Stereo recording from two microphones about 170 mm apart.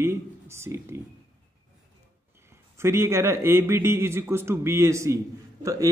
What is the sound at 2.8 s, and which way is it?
A man's voice, 15° right (ahead or behind).